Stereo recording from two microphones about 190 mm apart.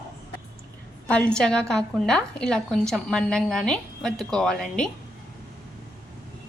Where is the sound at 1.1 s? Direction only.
5° left (ahead or behind).